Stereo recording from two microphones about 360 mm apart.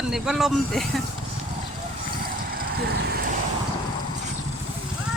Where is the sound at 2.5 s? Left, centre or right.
Right.